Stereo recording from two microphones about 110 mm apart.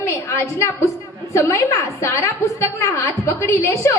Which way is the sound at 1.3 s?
25° left (ahead or behind).